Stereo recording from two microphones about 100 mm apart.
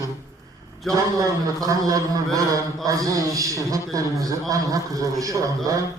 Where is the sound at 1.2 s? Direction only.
35° right (ahead or behind).